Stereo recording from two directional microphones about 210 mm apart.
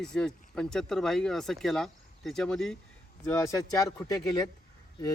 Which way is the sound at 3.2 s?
15° left (ahead or behind).